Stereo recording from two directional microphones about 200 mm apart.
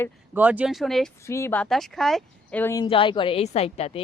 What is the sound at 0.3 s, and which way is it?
Speech, 10° right (ahead or behind).